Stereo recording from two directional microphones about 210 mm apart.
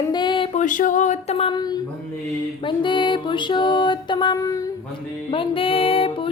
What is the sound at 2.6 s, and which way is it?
Female singing, 25° left (ahead or behind).